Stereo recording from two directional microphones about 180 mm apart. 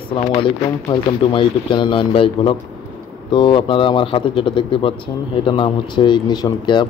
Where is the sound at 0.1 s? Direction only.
30° left (ahead or behind).